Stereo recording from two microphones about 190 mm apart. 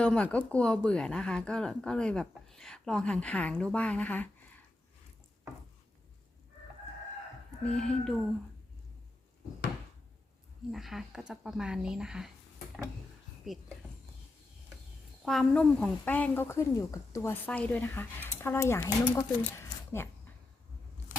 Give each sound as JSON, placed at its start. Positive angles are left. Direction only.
{"t": 0.0, "sound": "speech", "side_deg": 5}
{"t": 7.6, "sound": "speech", "side_deg": 5}
{"t": 10.7, "sound": "speech", "side_deg": 0}
{"t": 15.2, "sound": "speech", "side_deg": 0}
{"t": 21.1, "sound": "vehicle", "side_deg": 45}